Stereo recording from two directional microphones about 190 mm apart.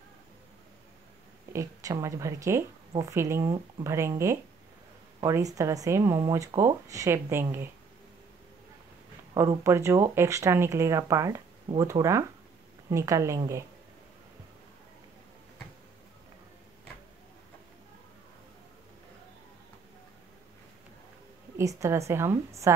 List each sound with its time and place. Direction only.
1.5 s speech: 15° right (ahead or behind)
9.3 s speech: 15° right (ahead or behind)
21.5 s speech: 15° right (ahead or behind)